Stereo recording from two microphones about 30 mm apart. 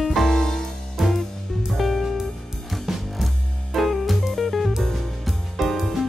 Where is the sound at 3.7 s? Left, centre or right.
Centre.